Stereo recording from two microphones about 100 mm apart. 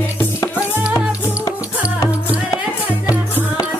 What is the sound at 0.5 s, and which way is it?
Music, 10° right (ahead or behind).